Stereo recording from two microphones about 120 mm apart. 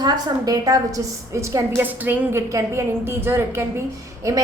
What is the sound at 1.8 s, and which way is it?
A woman's voice, 15° right (ahead or behind).